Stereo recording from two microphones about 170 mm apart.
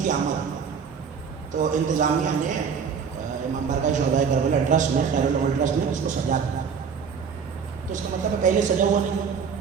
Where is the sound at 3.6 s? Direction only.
45° right (ahead or behind).